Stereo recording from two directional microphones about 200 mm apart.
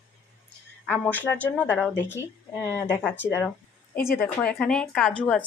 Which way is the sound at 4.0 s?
45° left (ahead or behind).